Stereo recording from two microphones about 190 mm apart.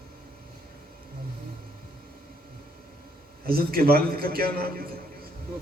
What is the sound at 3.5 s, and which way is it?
A man's voice, 50° right (ahead or behind).